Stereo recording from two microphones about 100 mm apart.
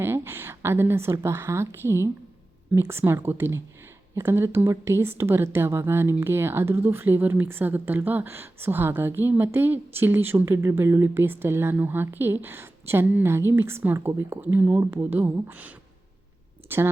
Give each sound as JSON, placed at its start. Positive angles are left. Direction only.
{"t": 0.0, "sound": "a woman's voice", "side_deg": -25}
{"t": 14.8, "sound": "speech", "side_deg": -25}